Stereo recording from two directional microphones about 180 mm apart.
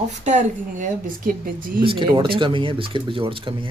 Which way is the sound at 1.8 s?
30° right (ahead or behind).